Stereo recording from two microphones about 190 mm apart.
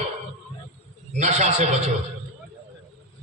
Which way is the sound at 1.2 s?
35° right (ahead or behind).